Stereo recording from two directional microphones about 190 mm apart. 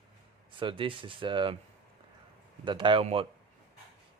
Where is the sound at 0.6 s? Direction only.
25° right (ahead or behind).